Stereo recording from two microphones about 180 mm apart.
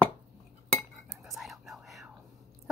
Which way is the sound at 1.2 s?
Centre (ahead or behind).